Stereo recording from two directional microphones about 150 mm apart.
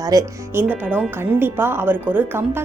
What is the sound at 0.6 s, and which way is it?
A woman's voice, 10° right (ahead or behind).